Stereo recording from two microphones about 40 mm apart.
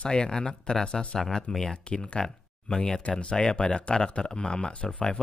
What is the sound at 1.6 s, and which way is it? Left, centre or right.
Speech, left.